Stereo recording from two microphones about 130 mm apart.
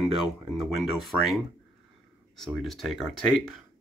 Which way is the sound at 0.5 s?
Centre (ahead or behind).